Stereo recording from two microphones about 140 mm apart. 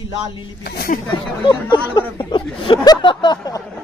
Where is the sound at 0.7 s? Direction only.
90° left.